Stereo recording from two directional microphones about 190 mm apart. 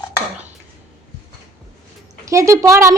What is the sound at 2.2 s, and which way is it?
Speech, 15° right (ahead or behind).